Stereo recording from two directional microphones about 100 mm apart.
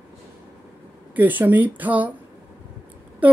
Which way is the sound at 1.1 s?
15° right (ahead or behind).